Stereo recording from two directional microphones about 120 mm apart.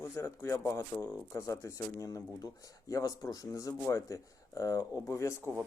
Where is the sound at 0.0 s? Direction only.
25° left (ahead or behind).